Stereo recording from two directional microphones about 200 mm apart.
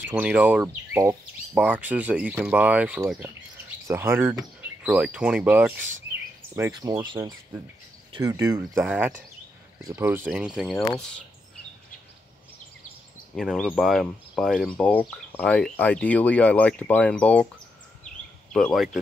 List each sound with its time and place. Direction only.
0.0 s speech: 5° right (ahead or behind)
6.8 s speech: 20° right (ahead or behind); by 10.9 s centre (ahead or behind)
13.4 s speech: centre (ahead or behind)
18.5 s speech: centre (ahead or behind)